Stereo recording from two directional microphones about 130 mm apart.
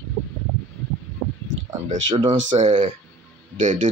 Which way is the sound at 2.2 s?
35° right (ahead or behind).